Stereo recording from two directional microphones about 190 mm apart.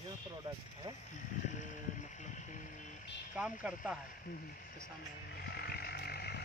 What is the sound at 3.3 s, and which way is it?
Speech, 5° right (ahead or behind).